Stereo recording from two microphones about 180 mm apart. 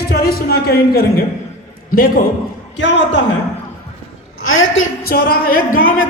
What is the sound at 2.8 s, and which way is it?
Speech, 85° left.